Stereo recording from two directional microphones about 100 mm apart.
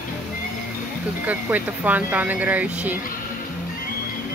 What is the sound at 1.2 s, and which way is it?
Speech, 15° right (ahead or behind).